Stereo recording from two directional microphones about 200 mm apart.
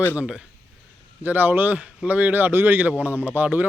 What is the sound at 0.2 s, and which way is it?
Speech, 5° right (ahead or behind).